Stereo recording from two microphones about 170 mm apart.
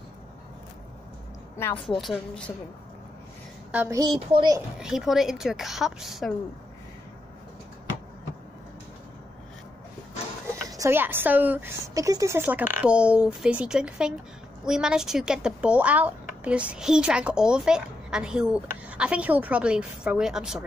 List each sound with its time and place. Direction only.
1.9 s speech: centre (ahead or behind)
3.7 s speech: 10° right (ahead or behind)
4.3 s a child's voice: 30° right (ahead or behind)
4.7 s speech: 5° right (ahead or behind)
10.7 s speech: 15° right (ahead or behind)